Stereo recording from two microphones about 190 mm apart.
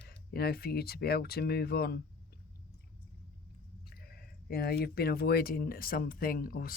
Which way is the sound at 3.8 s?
55° left (ahead or behind).